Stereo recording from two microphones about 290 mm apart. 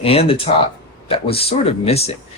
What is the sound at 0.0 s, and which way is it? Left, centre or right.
Speech, centre.